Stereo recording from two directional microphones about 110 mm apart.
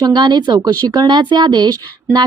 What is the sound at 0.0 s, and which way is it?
Speech, 40° right (ahead or behind).